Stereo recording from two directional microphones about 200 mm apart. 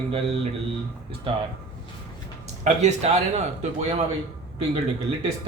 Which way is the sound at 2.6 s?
35° right (ahead or behind).